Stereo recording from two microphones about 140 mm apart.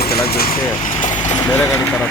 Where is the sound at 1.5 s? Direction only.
15° left (ahead or behind).